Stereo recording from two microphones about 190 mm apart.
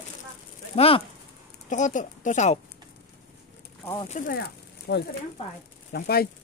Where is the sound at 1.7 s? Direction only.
40° left (ahead or behind).